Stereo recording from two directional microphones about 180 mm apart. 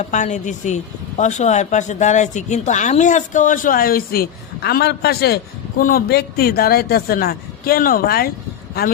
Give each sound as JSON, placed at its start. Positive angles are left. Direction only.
{"t": 0.0, "sound": "speech", "side_deg": 40}